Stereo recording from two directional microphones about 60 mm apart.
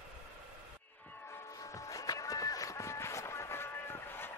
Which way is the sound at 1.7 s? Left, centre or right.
Left.